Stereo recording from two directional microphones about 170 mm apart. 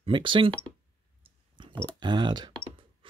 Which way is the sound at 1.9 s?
25° right (ahead or behind).